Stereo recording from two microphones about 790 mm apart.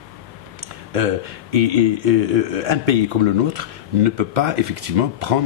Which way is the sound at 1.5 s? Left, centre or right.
Right.